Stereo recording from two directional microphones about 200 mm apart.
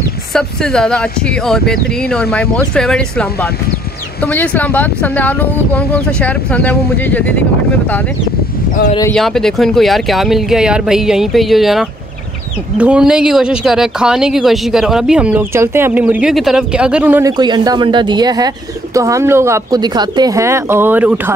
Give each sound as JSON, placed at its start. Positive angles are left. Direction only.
{"t": 0.3, "sound": "speech", "side_deg": 0}
{"t": 9.1, "sound": "speech", "side_deg": 0}
{"t": 17.3, "sound": "speech", "side_deg": -20}